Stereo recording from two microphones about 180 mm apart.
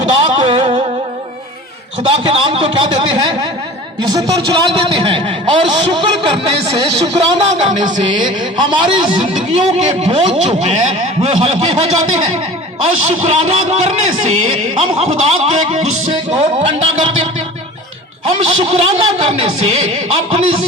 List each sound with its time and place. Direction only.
0.1 s a sound: 25° right (ahead or behind)
2.1 s a man's voice: 30° right (ahead or behind)
7.9 s a man's voice: 25° right (ahead or behind)
9.3 s a man's voice: 35° right (ahead or behind)
18.3 s a man's voice: 35° right (ahead or behind)